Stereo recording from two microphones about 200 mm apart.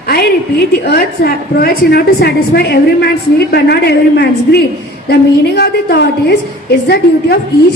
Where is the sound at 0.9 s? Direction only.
50° left (ahead or behind).